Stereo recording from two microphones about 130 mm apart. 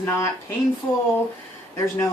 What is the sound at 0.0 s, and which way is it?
Speech, 20° left (ahead or behind).